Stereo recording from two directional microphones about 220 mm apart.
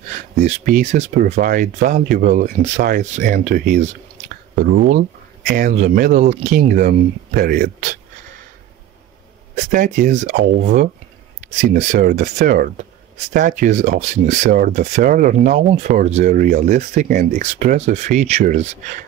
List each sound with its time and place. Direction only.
0.4 s speech: 35° right (ahead or behind)
5.5 s speech: 35° right (ahead or behind)
9.6 s speech: 35° right (ahead or behind)